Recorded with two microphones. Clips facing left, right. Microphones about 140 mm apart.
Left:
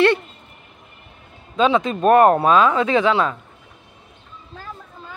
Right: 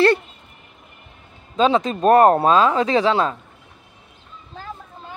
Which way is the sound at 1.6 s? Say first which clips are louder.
Even; 35° right (ahead or behind).